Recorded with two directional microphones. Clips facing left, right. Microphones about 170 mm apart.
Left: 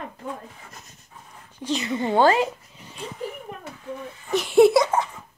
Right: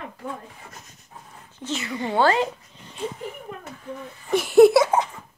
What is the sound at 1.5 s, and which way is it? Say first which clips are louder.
Speech: left 4 dB; 15° left (ahead or behind).